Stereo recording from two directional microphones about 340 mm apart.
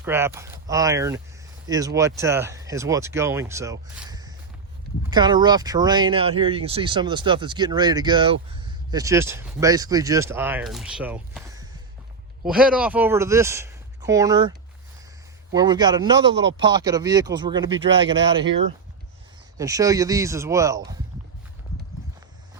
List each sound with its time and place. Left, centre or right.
0.0 s speech: centre
15.5 s speech: centre
16.4 s speech: right
16.6 s speech: centre
19.5 s speech: centre